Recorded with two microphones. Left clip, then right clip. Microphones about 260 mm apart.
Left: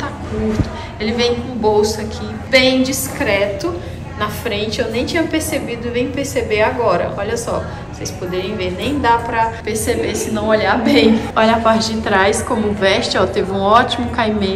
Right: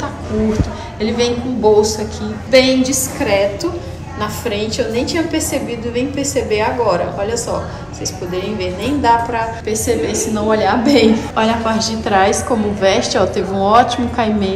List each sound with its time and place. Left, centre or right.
1.0 s a woman's voice: centre